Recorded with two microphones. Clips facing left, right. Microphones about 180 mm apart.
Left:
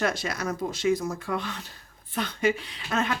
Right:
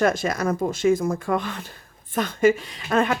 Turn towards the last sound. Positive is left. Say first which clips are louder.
# right 6 dB
turn(degrees=-50)  # may be behind; listen again after turning